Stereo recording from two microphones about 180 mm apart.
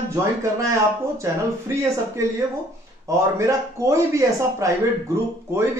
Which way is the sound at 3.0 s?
15° right (ahead or behind).